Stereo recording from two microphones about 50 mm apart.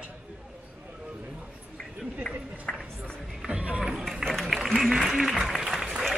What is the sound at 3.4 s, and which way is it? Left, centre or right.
Music, right.